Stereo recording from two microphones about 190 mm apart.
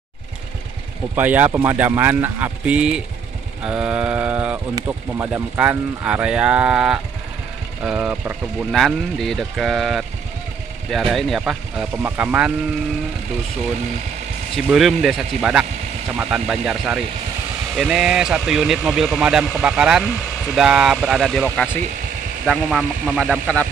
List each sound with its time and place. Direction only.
1.1 s speech: 10° right (ahead or behind)
14.7 s speech: centre (ahead or behind)